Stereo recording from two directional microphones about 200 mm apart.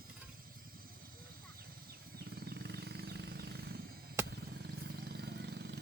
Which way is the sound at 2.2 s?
50° right (ahead or behind).